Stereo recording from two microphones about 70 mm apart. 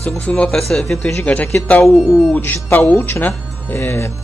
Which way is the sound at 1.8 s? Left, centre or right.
Centre.